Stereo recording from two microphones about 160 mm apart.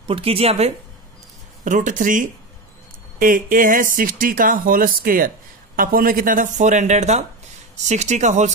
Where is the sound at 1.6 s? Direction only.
50° right (ahead or behind).